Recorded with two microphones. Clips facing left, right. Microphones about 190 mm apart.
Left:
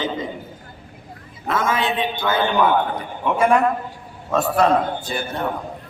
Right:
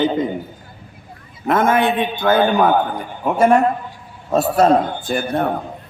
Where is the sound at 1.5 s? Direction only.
55° right (ahead or behind).